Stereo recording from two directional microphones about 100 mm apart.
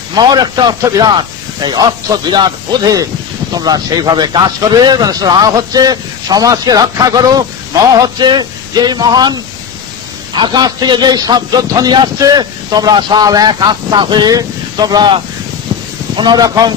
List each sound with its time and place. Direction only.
0.1 s a man's voice: 45° right (ahead or behind)
16.2 s speech: 45° right (ahead or behind)